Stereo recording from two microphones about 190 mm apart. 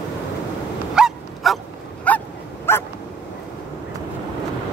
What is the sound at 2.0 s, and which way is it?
Dog, 10° left (ahead or behind).